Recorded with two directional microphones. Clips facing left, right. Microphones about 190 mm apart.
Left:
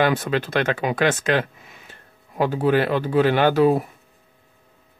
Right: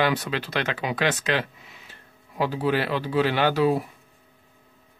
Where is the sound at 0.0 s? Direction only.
50° left (ahead or behind).